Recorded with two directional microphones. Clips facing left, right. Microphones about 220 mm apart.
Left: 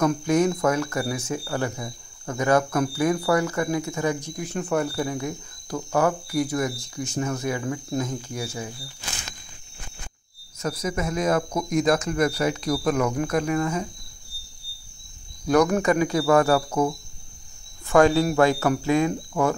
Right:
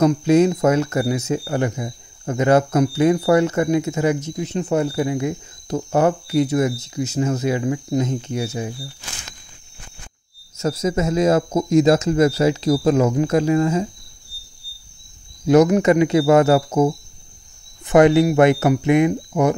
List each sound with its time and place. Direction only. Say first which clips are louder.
0.0 s speech: right 6 dB; 25° right (ahead or behind)
10.6 s speech: right 7 dB; 25° right (ahead or behind)
15.4 s speech: right 6 dB; 20° right (ahead or behind)